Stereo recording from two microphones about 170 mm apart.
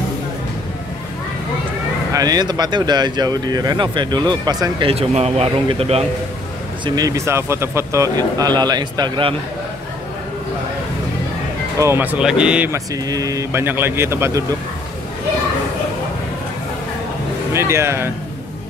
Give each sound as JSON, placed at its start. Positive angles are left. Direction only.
{"t": 2.1, "sound": "speech", "side_deg": -20}
{"t": 7.0, "sound": "speech", "side_deg": -20}
{"t": 11.8, "sound": "a man's voice", "side_deg": -10}
{"t": 12.7, "sound": "a man's voice", "side_deg": -20}
{"t": 17.5, "sound": "a man's voice", "side_deg": -15}